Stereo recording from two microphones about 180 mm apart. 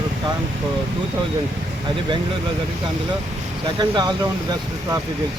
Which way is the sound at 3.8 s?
25° right (ahead or behind).